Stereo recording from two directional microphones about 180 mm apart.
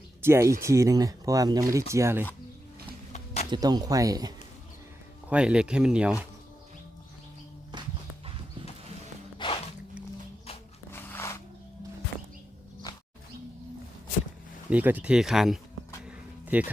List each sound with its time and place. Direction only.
0.2 s speech: 15° right (ahead or behind)
3.5 s speech: 20° right (ahead or behind)
5.3 s speech: 5° right (ahead or behind)
9.4 s music: 30° left (ahead or behind)
10.9 s a sound: 15° left (ahead or behind)
12.9 s roaring cats: 20° left (ahead or behind)
14.7 s speech: 10° right (ahead or behind)
16.0 s a sound: 10° right (ahead or behind)